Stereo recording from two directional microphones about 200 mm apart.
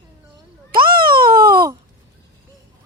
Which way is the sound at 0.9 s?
45° right (ahead or behind).